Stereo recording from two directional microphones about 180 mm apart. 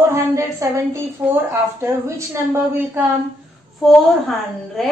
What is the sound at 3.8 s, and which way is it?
Speech, 5° left (ahead or behind).